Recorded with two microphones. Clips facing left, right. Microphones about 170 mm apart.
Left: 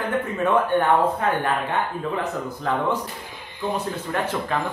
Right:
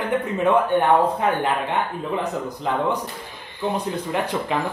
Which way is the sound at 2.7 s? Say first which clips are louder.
Even; 20° right (ahead or behind).